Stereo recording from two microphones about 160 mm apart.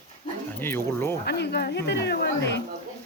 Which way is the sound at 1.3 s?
85° left.